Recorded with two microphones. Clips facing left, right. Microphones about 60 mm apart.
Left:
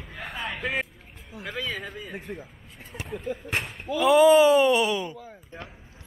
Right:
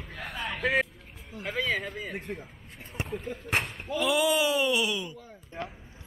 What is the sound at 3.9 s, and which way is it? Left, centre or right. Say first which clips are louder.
Speech: left 9 dB; left.